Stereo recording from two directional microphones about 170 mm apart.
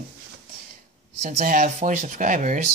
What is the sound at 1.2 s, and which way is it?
Speech, 50° right (ahead or behind).